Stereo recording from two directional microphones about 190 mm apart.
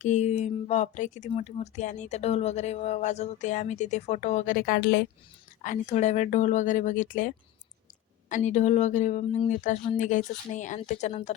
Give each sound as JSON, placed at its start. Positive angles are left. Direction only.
{"t": 0.0, "sound": "speech", "side_deg": 35}
{"t": 5.6, "sound": "speech", "side_deg": 40}